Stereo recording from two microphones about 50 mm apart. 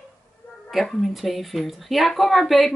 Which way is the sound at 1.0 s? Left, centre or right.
Centre.